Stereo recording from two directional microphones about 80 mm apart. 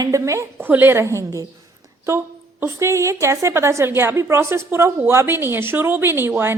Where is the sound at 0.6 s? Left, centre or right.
Right.